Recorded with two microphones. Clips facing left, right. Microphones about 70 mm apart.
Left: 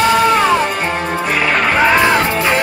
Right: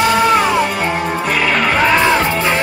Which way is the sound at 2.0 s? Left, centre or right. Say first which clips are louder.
Even; left.